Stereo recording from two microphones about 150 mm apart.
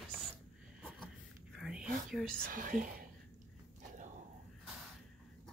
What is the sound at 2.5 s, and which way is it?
Speech, 65° right (ahead or behind).